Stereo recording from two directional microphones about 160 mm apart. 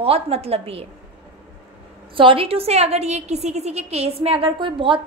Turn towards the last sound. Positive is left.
turn(degrees=-30)  # may be behind; listen again after turning